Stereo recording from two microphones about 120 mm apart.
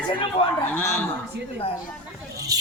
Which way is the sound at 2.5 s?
30° right (ahead or behind).